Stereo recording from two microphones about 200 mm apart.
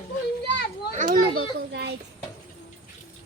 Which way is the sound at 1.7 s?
55° right (ahead or behind).